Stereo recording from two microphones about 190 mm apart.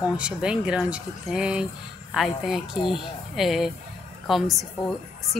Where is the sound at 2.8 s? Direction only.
25° left (ahead or behind).